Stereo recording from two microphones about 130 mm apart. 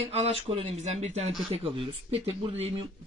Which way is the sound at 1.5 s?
45° right (ahead or behind).